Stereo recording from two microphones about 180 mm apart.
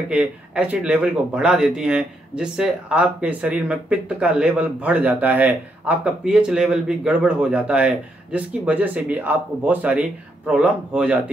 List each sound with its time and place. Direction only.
0.1 s speech: 10° right (ahead or behind)